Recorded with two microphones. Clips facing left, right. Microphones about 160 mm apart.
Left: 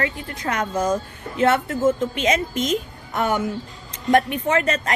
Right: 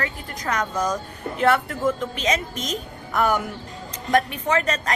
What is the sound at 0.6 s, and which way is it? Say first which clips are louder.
Speech: left 4 dB; 25° left (ahead or behind).